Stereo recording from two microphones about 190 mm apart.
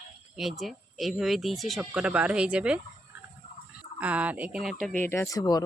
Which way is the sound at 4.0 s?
5° right (ahead or behind).